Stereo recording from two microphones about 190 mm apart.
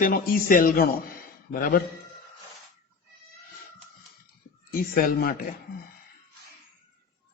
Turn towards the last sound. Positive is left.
turn(degrees=50)  # may be behind; listen again after turning